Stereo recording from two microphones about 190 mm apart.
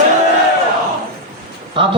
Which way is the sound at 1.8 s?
25° right (ahead or behind).